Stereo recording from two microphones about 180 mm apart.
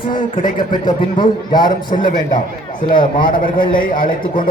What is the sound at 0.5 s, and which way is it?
A man's voice, 25° left (ahead or behind).